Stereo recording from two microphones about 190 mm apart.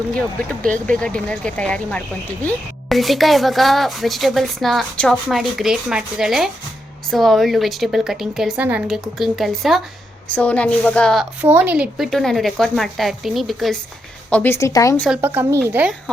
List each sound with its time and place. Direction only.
0.9 s a woman's voice: 5° left (ahead or behind)
11.4 s a woman's voice: 10° right (ahead or behind); by 15.0 s 15° left (ahead or behind)
15.2 s speech: 10° right (ahead or behind)